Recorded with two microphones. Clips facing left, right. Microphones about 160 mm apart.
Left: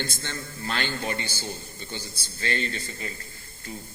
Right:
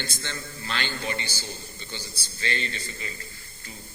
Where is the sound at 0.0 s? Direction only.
50° left (ahead or behind).